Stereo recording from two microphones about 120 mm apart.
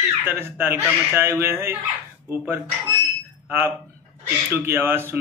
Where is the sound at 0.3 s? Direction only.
20° right (ahead or behind).